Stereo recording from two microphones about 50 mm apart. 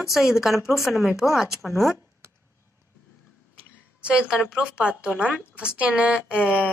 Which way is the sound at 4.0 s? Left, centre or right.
Centre.